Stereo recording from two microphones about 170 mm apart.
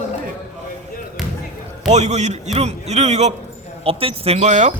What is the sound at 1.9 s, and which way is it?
Speech, 45° right (ahead or behind).